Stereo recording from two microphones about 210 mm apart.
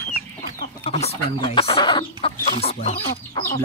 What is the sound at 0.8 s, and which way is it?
Speech, 30° left (ahead or behind).